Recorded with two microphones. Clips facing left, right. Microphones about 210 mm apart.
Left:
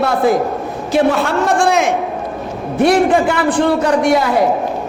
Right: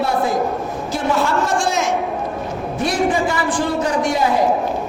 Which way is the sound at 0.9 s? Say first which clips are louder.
Left 5 dB; 60° left (ahead or behind).